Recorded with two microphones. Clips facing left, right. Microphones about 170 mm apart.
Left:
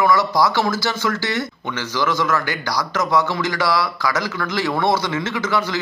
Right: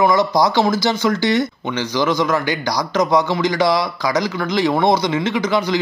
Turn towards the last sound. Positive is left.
turn(degrees=-15)  # may be behind; listen again after turning